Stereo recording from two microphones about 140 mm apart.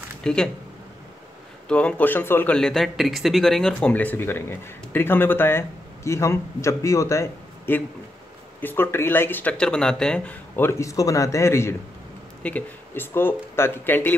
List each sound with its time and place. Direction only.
0.2 s speech: 5° left (ahead or behind)
1.7 s speech: 10° left (ahead or behind)